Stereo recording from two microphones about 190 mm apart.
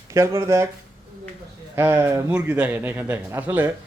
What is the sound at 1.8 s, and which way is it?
Speech, 10° right (ahead or behind).